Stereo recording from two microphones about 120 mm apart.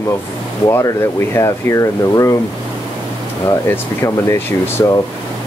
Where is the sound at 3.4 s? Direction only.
25° left (ahead or behind).